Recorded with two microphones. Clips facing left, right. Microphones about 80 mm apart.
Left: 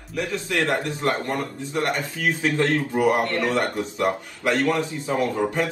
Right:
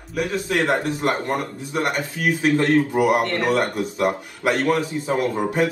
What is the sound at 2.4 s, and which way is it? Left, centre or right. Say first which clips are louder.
Speech: right 5 dB; right.